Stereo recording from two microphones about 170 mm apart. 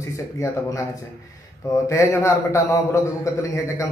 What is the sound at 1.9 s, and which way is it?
A man's voice, 15° left (ahead or behind).